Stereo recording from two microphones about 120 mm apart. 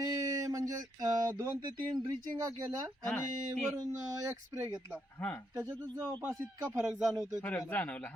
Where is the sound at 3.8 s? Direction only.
30° right (ahead or behind).